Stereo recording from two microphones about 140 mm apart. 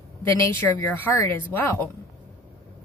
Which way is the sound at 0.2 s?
15° left (ahead or behind).